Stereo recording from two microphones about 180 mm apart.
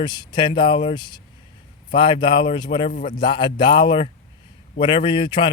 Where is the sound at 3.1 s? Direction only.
25° left (ahead or behind).